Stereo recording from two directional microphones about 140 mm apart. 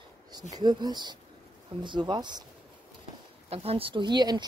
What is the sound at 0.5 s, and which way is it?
A woman's voice, 30° right (ahead or behind).